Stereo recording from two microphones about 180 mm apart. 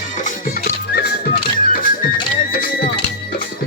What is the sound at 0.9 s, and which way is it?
Music, 55° left (ahead or behind).